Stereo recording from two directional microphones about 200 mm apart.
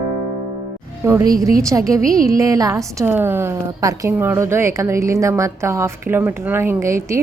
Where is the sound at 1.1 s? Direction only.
15° right (ahead or behind).